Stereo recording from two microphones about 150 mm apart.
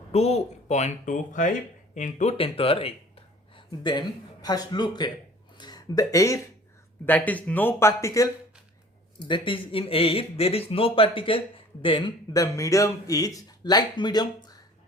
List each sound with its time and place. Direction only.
0.1 s speech: 45° left (ahead or behind)
2.4 s speech: 40° left (ahead or behind); by 6.4 s 20° left (ahead or behind)
7.0 s speech: 10° left (ahead or behind)
9.2 s speech: 35° left (ahead or behind)